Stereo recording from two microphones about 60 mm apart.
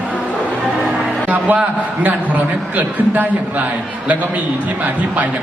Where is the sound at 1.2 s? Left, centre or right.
Right.